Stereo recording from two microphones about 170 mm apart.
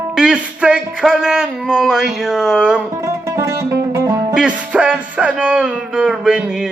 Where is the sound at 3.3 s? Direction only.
15° right (ahead or behind).